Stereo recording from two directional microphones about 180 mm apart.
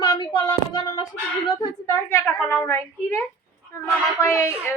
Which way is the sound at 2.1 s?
10° left (ahead or behind).